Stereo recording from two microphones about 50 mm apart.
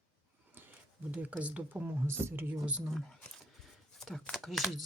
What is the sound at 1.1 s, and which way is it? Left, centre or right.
Speech, right.